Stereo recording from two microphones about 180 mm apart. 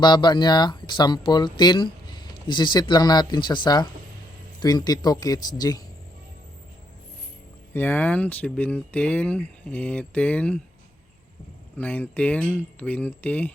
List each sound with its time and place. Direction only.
0.0 s speech: 25° left (ahead or behind)
7.7 s speech: 10° left (ahead or behind)
11.8 s speech: 10° left (ahead or behind)